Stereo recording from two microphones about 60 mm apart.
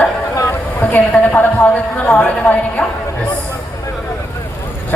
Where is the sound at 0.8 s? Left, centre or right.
Left.